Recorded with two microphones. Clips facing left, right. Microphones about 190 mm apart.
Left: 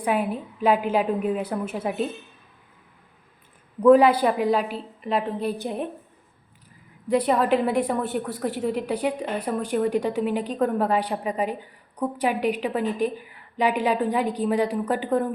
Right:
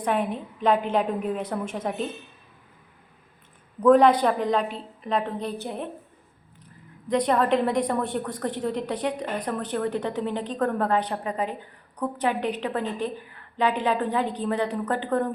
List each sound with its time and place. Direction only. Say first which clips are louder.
0.0 s a woman's voice: left 1 dB; 5° left (ahead or behind)
3.8 s a woman's voice: left 1 dB; 5° left (ahead or behind)
7.1 s a woman's voice: left 1 dB; 5° left (ahead or behind)